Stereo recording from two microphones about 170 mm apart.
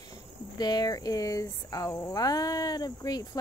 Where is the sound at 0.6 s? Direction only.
25° left (ahead or behind).